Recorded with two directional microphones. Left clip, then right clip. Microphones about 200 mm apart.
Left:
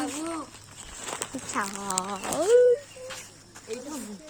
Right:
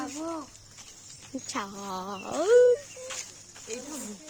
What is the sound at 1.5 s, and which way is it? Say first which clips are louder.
Speech: left 4 dB; 20° right (ahead or behind).